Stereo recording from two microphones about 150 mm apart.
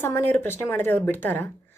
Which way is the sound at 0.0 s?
15° left (ahead or behind).